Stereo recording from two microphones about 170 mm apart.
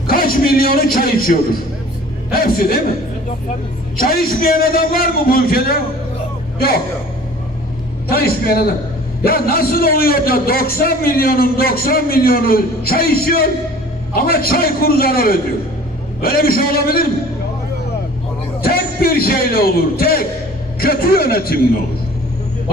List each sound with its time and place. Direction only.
0.1 s a man's voice: 60° left (ahead or behind)
3.9 s a man's voice: 60° left (ahead or behind)
8.1 s a man's voice: 65° left (ahead or behind)
18.6 s a man's voice: 60° left (ahead or behind)